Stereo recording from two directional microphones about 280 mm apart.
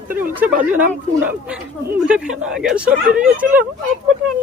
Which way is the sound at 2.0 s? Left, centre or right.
Centre.